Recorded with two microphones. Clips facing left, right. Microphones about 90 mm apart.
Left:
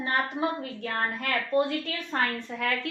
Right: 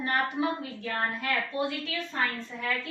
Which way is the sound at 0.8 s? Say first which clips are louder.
Left 2 dB; 50° left (ahead or behind).